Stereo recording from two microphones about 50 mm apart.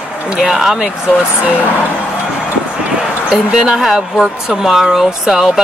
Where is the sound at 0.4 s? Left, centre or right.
Centre.